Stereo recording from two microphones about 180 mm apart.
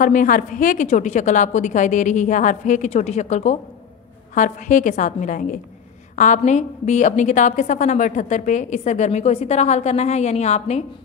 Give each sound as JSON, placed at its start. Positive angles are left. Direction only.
{"t": 0.0, "sound": "a woman's voice", "side_deg": 45}